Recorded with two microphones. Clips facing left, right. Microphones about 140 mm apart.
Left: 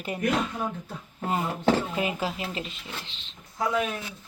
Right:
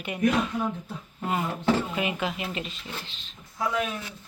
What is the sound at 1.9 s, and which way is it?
Speech, 30° left (ahead or behind).